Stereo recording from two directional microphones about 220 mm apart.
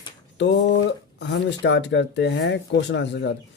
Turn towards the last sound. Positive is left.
turn(degrees=55)  # may be behind; listen again after turning